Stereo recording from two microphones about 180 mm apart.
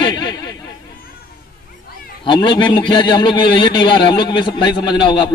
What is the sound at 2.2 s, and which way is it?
A man's voice, 25° left (ahead or behind).